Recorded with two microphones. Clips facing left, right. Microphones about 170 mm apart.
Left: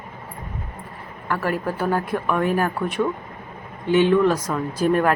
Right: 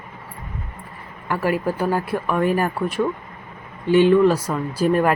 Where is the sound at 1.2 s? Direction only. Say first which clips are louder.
Right 3 dB; 10° right (ahead or behind).